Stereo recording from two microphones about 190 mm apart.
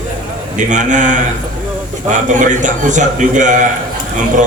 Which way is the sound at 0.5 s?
40° right (ahead or behind).